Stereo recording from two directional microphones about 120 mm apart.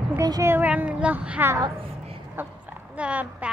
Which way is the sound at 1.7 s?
50° right (ahead or behind).